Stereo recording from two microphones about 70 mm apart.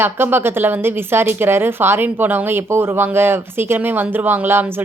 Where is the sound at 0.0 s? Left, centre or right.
Right.